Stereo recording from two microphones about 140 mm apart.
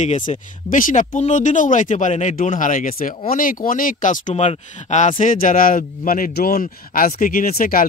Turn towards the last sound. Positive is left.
turn(degrees=90)